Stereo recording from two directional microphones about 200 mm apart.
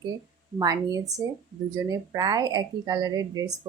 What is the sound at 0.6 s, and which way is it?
Speech, 20° right (ahead or behind).